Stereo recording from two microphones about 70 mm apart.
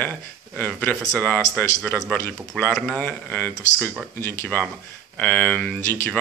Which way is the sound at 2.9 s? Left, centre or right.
Left.